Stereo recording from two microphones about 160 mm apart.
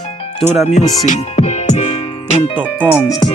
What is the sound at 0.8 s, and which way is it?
Music, 50° left (ahead or behind).